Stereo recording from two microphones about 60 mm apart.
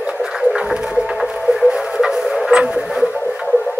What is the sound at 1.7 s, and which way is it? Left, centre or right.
Music, centre.